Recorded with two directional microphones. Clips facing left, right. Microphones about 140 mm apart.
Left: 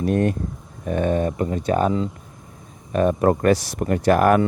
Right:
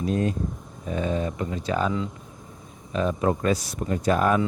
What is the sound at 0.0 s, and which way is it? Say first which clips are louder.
Speech: left 4 dB; 60° left (ahead or behind).